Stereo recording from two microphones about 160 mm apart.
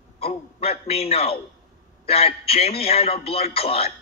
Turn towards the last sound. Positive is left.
turn(degrees=40)  # may be behind; listen again after turning